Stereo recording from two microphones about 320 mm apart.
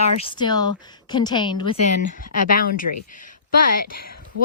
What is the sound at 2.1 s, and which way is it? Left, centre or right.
Speech, left.